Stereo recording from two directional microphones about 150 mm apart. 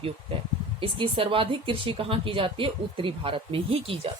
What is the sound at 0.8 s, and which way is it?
Speech, 35° right (ahead or behind).